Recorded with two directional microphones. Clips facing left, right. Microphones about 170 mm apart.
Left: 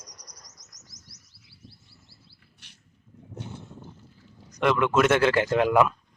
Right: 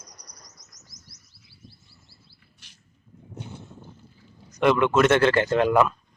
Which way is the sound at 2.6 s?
60° left (ahead or behind).